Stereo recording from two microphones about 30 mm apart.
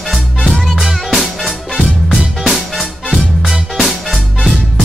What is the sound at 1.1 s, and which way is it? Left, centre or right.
Music, centre.